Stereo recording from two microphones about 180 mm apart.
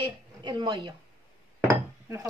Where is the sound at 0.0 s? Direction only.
25° right (ahead or behind).